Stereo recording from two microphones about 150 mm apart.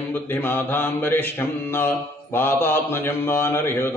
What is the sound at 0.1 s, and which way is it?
Mantra, 15° left (ahead or behind).